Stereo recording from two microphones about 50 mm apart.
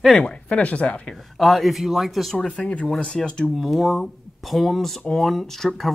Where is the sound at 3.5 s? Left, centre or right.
Centre.